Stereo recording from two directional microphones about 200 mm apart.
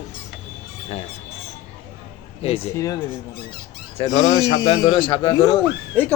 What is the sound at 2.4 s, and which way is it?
Speech, 30° left (ahead or behind).